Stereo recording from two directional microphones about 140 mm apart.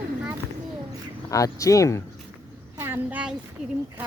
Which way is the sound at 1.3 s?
25° left (ahead or behind).